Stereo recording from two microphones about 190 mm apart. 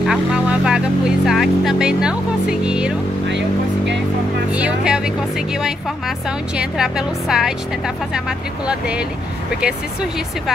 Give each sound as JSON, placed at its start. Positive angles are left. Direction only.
{"t": 0.0, "sound": "vehicle", "side_deg": -5}
{"t": 2.6, "sound": "speech", "side_deg": -5}
{"t": 3.3, "sound": "vehicle", "side_deg": -70}
{"t": 4.5, "sound": "speech", "side_deg": -5}